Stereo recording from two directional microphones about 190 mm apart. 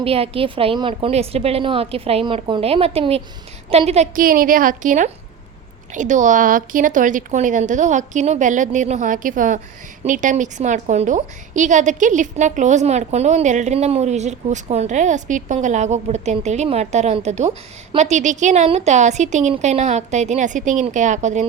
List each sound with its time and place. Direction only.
0.0 s a woman's voice: 30° right (ahead or behind)